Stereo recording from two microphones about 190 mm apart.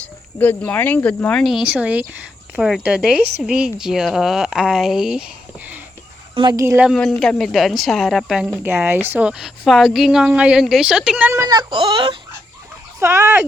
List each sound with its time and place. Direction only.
0.0 s a woman's voice: 10° left (ahead or behind)
6.3 s speech: 20° right (ahead or behind)
6.8 s a woman's voice: centre (ahead or behind)
11.3 s speech: 20° right (ahead or behind)
13.0 s speech: 15° right (ahead or behind)